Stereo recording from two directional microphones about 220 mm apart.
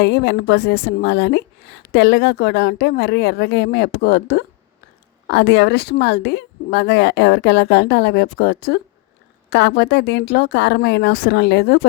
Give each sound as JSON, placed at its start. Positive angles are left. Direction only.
{"t": 0.0, "sound": "speech", "side_deg": 50}